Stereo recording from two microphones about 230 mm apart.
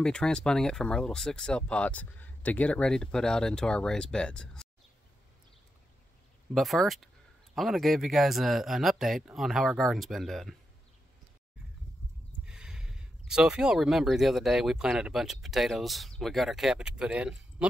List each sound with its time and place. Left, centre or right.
0.0 s speech: centre
6.5 s speech: centre
12.4 s speech: centre